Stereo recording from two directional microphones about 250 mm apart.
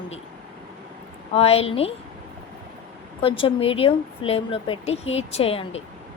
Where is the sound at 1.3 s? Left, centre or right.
Left.